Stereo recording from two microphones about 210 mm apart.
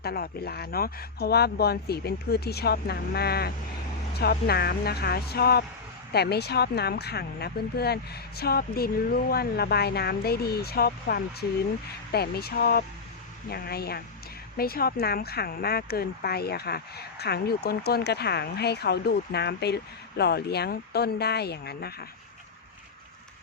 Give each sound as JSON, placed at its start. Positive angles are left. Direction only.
{"t": 0.0, "sound": "speech", "side_deg": 45}